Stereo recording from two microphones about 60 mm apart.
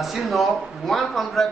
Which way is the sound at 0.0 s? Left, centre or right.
Centre.